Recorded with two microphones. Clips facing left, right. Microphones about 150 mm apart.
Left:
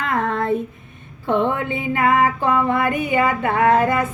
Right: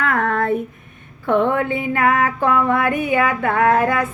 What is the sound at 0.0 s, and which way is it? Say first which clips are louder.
Female singing: right 2 dB; 60° right (ahead or behind).